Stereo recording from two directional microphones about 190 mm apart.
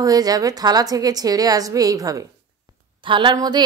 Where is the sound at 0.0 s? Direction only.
20° right (ahead or behind).